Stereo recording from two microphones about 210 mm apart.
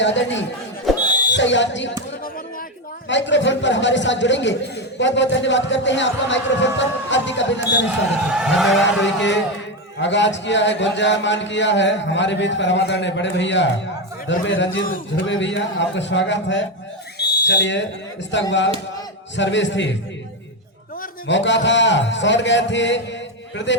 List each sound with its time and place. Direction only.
0.0 s a man's voice: 60° left (ahead or behind)
0.9 s a sound: centre (ahead or behind)
1.3 s a man's voice: 60° left (ahead or behind)
3.1 s a man's voice: 60° left (ahead or behind)
8.3 s a sound: centre (ahead or behind)
9.0 s a man's voice: 60° left (ahead or behind)
14.8 s a man's voice: 40° left (ahead or behind)
15.2 s a man's voice: 60° left (ahead or behind)
17.2 s whistle: 55° left (ahead or behind)
18.3 s a man's voice: 60° left (ahead or behind)
21.2 s a man's voice: 60° left (ahead or behind)